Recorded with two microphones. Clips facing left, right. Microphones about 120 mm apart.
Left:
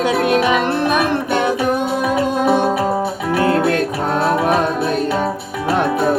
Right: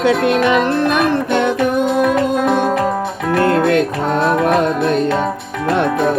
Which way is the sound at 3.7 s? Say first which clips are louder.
Right 3 dB; 45° left (ahead or behind).